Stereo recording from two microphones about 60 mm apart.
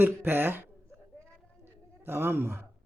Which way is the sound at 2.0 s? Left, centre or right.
Right.